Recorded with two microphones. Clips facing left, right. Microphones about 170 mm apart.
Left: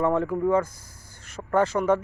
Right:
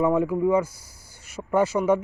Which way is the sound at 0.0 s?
10° right (ahead or behind).